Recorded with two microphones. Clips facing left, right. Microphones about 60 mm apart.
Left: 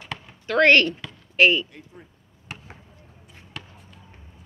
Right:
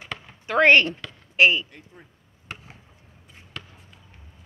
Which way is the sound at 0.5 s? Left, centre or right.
Centre.